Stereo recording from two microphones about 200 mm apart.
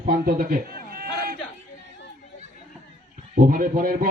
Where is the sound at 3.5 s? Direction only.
45° right (ahead or behind).